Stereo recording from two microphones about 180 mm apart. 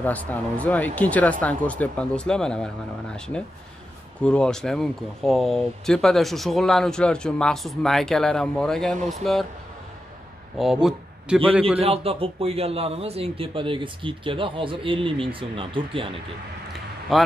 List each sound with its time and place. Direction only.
0.0 s speech: 10° left (ahead or behind)
10.6 s speech: centre (ahead or behind)
11.8 s a man's voice: 30° right (ahead or behind)
17.1 s speech: centre (ahead or behind)